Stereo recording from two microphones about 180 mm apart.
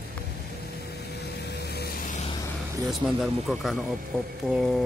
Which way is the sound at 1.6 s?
65° left (ahead or behind).